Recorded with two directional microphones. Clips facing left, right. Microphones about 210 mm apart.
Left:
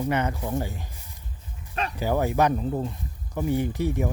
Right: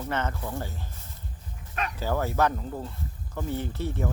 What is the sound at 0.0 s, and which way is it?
Speech, 15° left (ahead or behind).